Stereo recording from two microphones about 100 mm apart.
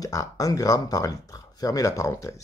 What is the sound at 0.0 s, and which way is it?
Speech, 35° left (ahead or behind).